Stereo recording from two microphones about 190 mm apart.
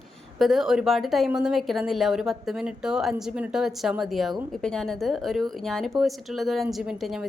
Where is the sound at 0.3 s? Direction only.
Centre (ahead or behind).